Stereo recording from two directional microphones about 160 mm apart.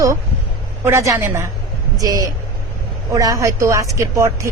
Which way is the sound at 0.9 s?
20° right (ahead or behind).